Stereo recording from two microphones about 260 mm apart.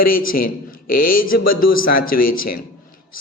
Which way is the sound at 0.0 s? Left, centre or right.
Left.